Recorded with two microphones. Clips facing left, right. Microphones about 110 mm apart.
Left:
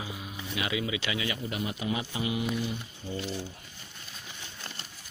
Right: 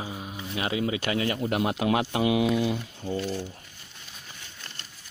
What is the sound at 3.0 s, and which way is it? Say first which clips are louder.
Speech: right 6 dB; 55° right (ahead or behind).